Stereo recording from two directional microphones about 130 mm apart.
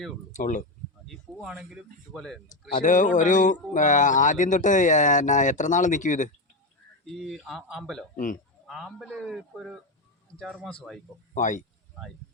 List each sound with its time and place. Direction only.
0.3 s speech: 80° left
1.0 s speech: centre (ahead or behind)
2.7 s a man's voice: 80° left
7.0 s speech: centre (ahead or behind)
8.1 s speech: 90° left
8.6 s speech: centre (ahead or behind)
11.3 s a man's voice: 75° left (ahead or behind)